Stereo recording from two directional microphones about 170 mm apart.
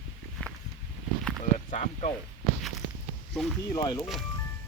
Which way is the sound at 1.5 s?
45° left (ahead or behind).